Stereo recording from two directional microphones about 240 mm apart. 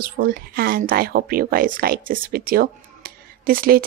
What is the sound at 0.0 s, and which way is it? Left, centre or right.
A woman's voice, right.